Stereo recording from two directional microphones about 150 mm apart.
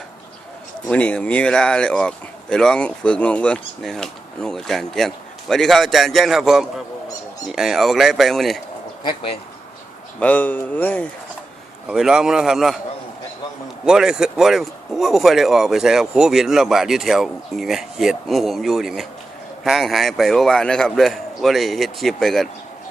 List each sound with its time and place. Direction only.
0.9 s speech: 10° left (ahead or behind)
9.0 s speech: 40° left (ahead or behind)
10.2 s speech: 10° left (ahead or behind)
11.9 s speech: 5° right (ahead or behind)
13.8 s speech: 5° right (ahead or behind)